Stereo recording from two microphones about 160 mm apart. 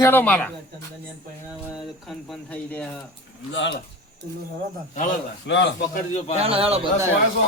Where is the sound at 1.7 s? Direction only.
Centre (ahead or behind).